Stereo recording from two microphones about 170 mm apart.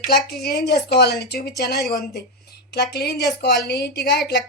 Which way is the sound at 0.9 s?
80° left.